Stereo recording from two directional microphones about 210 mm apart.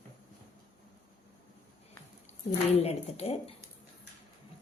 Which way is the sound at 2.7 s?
30° left (ahead or behind).